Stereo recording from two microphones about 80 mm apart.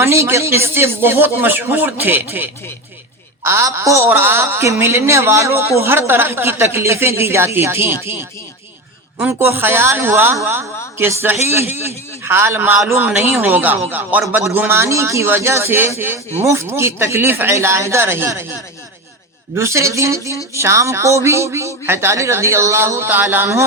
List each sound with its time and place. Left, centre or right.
0.0 s speech: right
3.4 s speech: right
9.4 s speech: right
19.5 s speech: right